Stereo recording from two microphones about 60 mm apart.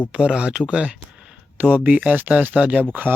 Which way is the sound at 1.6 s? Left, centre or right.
Right.